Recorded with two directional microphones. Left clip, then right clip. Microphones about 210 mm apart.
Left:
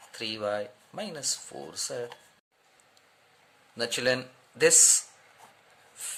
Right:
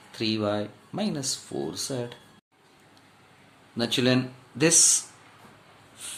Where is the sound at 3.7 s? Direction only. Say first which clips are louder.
Right 3 dB; 25° left (ahead or behind).